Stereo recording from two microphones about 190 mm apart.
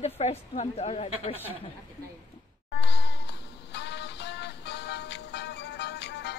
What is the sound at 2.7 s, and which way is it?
Music, 65° left (ahead or behind).